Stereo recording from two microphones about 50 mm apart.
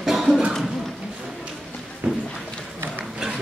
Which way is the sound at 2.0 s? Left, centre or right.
Right.